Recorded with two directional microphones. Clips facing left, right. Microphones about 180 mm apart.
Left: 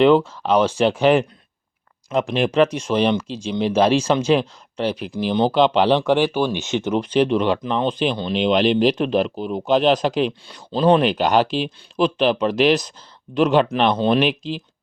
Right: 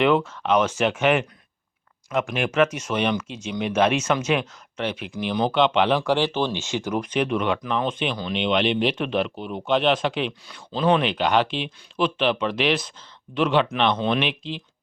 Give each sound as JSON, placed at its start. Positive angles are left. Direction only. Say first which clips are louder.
{"t": 0.4, "sound": "speech", "louder": "left 4 dB", "side_deg": 35}
{"t": 6.0, "sound": "speech", "louder": "left 4 dB", "side_deg": 15}